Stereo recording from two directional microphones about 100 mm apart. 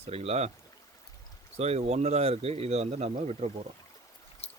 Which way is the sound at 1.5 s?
90° right.